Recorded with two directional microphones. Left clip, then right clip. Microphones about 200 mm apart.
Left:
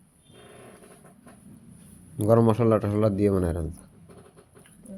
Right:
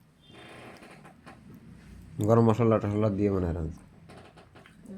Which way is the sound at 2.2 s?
10° left (ahead or behind).